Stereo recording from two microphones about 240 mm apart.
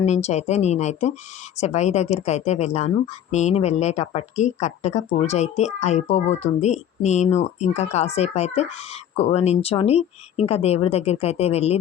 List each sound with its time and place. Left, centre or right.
0.0 s speech: left